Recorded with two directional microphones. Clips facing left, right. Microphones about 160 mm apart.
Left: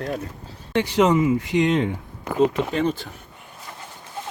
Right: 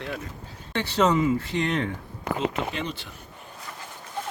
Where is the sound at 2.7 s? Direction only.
45° left (ahead or behind).